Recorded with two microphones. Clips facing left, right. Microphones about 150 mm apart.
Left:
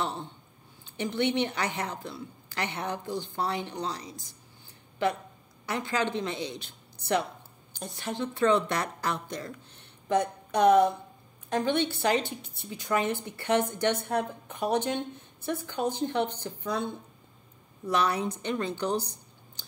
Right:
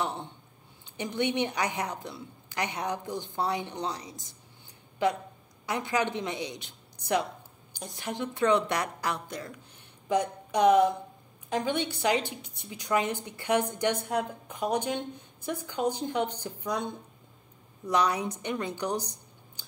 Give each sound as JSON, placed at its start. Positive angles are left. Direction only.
{"t": 0.0, "sound": "a woman's voice", "side_deg": -15}